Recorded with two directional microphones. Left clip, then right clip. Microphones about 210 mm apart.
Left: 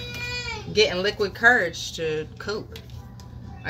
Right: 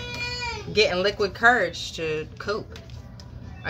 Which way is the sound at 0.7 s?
15° right (ahead or behind).